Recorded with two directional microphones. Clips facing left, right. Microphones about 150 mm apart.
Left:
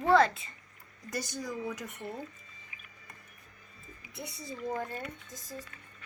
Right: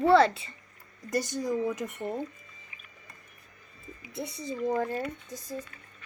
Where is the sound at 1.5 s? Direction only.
45° right (ahead or behind).